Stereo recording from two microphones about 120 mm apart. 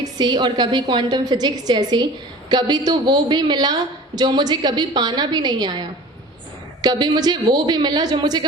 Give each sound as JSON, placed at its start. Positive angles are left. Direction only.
{"t": 0.0, "sound": "a woman's voice", "side_deg": -35}
{"t": 6.8, "sound": "a woman's voice", "side_deg": -35}